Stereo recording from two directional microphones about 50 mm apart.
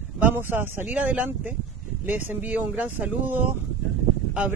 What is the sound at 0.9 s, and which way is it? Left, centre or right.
Speech, right.